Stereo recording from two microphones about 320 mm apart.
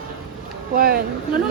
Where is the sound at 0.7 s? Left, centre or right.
Right.